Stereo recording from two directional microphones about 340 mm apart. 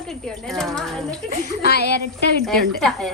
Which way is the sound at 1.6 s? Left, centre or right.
Left.